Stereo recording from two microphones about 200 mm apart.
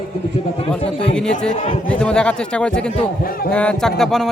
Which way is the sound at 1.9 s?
5° left (ahead or behind).